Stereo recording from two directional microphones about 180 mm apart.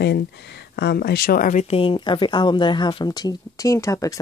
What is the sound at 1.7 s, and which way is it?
Speech, 30° left (ahead or behind).